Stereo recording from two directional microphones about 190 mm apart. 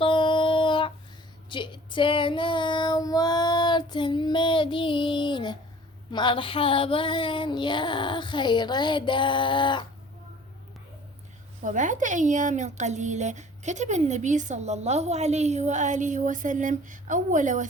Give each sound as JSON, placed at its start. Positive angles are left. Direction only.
{"t": 0.0, "sound": "a sound", "side_deg": 25}
{"t": 1.5, "sound": "child singing", "side_deg": 25}
{"t": 6.1, "sound": "female singing", "side_deg": 25}
{"t": 11.6, "sound": "a woman's voice", "side_deg": -40}